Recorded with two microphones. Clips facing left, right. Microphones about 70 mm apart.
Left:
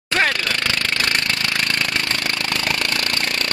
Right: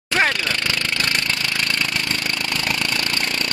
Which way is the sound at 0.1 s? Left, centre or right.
Centre.